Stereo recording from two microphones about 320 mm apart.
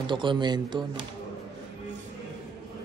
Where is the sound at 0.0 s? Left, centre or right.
Centre.